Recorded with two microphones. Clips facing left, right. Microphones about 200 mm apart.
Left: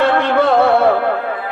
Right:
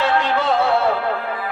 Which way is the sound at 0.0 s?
55° left (ahead or behind).